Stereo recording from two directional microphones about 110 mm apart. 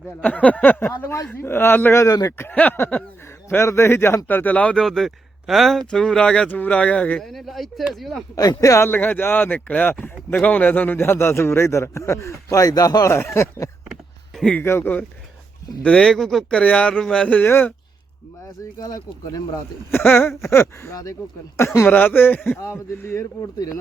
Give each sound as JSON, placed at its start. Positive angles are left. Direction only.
{"t": 0.2, "sound": "a man's voice", "side_deg": 15}
{"t": 7.3, "sound": "a man's voice", "side_deg": 0}
{"t": 8.4, "sound": "speech", "side_deg": 30}
{"t": 14.3, "sound": "speech", "side_deg": 5}
{"t": 14.6, "sound": "speech", "side_deg": 20}
{"t": 18.8, "sound": "speech", "side_deg": 35}
{"t": 19.9, "sound": "speech", "side_deg": 20}
{"t": 23.6, "sound": "speech", "side_deg": 35}